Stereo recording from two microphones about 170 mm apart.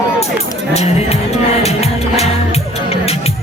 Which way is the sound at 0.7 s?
40° left (ahead or behind).